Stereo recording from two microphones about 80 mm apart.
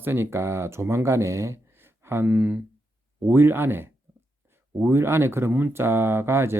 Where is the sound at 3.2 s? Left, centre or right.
Right.